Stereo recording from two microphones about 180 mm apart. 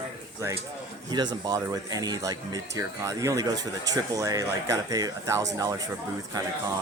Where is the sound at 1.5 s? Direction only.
20° right (ahead or behind).